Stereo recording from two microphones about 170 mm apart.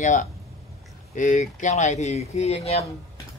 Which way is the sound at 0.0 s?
50° left (ahead or behind).